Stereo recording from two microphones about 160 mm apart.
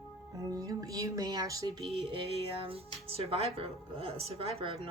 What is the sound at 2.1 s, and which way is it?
A woman's voice, 35° right (ahead or behind).